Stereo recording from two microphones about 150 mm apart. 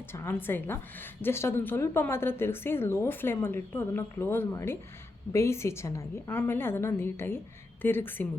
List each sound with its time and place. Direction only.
0.1 s a woman's voice: 15° left (ahead or behind)